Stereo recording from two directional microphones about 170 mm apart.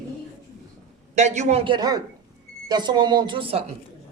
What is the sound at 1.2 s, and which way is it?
Speech, 45° right (ahead or behind).